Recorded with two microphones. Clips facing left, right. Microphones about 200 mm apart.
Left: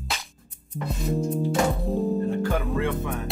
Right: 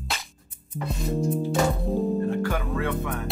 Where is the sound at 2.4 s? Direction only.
20° left (ahead or behind).